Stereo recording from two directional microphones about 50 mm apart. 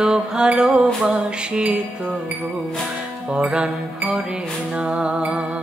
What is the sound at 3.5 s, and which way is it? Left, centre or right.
Music, right.